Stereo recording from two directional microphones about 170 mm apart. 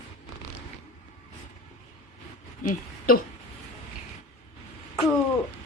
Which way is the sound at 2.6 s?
55° left (ahead or behind).